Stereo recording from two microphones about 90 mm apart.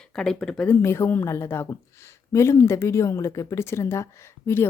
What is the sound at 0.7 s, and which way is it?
A woman's voice, 30° left (ahead or behind).